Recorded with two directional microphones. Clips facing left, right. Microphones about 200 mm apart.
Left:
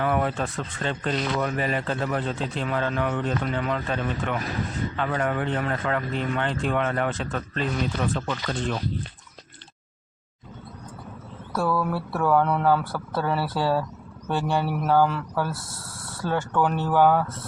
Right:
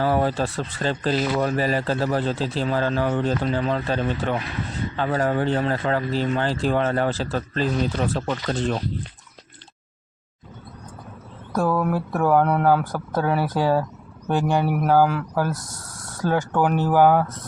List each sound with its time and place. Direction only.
0.0 s speech: 30° right (ahead or behind)
11.5 s speech: 20° right (ahead or behind)
12.4 s speech: 10° right (ahead or behind)